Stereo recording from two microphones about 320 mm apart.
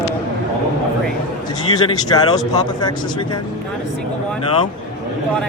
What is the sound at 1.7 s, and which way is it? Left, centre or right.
Speech, centre.